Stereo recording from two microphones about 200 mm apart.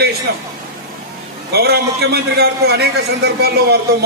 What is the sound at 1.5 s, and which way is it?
A man's voice, 55° right (ahead or behind).